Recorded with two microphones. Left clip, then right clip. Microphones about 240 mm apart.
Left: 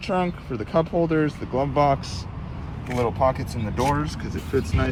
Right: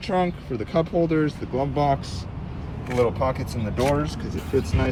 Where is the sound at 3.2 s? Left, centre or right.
Centre.